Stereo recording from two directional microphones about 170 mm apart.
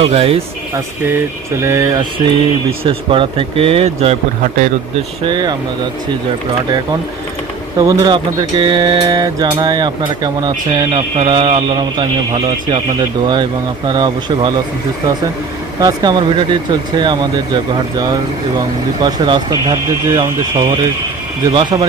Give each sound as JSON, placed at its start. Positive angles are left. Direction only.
{"t": 0.0, "sound": "speech", "side_deg": -35}
{"t": 1.6, "sound": "a man's voice", "side_deg": -15}
{"t": 5.2, "sound": "a man's voice", "side_deg": -25}
{"t": 7.8, "sound": "a man's voice", "side_deg": -20}
{"t": 15.8, "sound": "a man's voice", "side_deg": -25}